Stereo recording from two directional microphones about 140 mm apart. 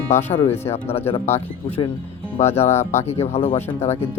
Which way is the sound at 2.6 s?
50° left (ahead or behind).